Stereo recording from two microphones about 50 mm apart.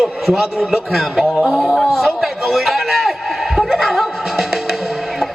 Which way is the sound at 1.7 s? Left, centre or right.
Centre.